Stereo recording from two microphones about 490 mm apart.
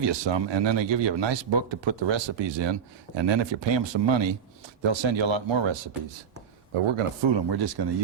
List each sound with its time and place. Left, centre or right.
0.0 s a man's voice: right
6.7 s a man's voice: right